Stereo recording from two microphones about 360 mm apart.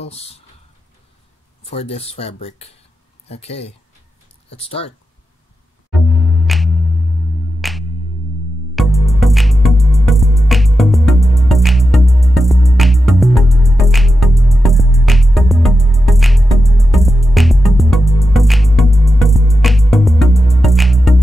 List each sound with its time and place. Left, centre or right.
1.6 s speech: centre
5.9 s music: centre